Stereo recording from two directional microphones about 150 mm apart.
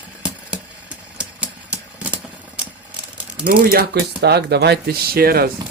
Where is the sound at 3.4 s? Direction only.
80° right.